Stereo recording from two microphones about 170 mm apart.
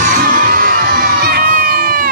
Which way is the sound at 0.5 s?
60° right (ahead or behind).